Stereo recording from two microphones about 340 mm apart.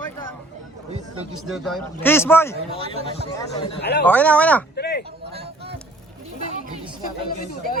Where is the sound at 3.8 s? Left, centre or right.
Left.